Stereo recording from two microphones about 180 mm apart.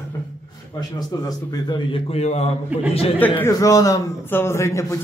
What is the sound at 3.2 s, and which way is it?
A man's voice, 10° left (ahead or behind).